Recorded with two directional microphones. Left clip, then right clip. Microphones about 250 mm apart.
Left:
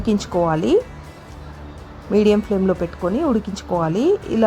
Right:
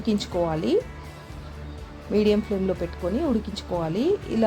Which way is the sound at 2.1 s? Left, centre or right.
Centre.